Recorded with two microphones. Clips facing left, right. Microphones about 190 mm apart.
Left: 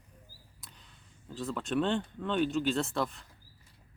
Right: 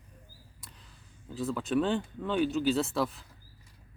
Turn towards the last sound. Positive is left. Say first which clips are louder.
# right 2 dB
turn(degrees=0)  # may be behind; listen again after turning